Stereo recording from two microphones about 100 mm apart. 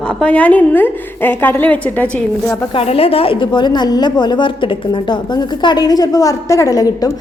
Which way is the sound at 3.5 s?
45° left (ahead or behind).